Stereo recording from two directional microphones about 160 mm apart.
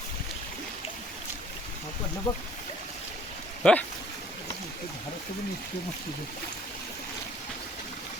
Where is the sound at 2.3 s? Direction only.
30° left (ahead or behind).